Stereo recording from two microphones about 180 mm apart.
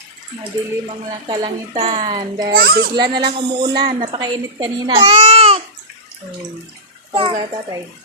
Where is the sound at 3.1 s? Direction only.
25° right (ahead or behind).